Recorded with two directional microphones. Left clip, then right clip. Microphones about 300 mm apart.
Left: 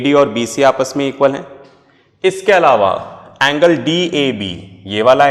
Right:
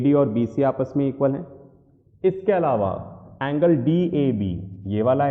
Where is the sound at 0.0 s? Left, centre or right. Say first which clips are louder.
Left 8 dB; centre.